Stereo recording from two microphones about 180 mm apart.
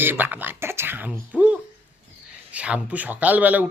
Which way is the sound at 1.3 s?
5° right (ahead or behind).